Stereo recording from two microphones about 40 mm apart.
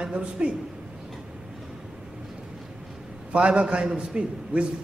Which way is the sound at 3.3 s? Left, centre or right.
Right.